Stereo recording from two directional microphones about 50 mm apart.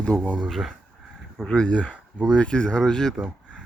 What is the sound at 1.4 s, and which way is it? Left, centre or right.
Speech, left.